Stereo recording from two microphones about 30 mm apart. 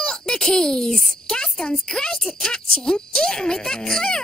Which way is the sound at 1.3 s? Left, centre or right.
Left.